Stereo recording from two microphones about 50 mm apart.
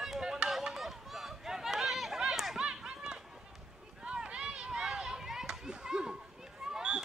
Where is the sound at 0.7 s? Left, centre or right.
Centre.